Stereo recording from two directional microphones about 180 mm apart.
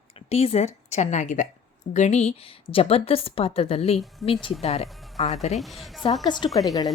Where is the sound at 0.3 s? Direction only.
35° left (ahead or behind).